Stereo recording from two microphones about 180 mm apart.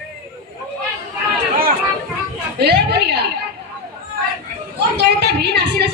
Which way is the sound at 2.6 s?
65° right (ahead or behind).